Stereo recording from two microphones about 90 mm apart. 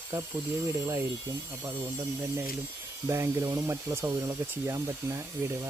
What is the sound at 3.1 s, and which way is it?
Speech, 35° right (ahead or behind).